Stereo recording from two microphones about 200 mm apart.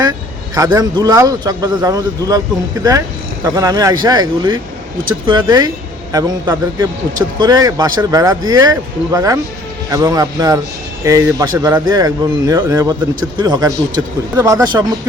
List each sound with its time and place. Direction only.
0.5 s speech: 20° right (ahead or behind)
3.4 s speech: 15° right (ahead or behind)